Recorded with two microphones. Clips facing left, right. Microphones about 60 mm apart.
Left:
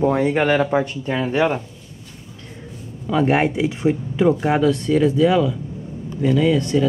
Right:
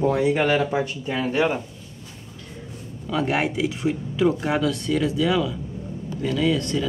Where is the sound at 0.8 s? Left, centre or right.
Centre.